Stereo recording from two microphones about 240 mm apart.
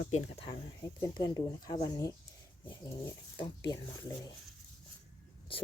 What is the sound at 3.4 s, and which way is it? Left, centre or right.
Speech, centre.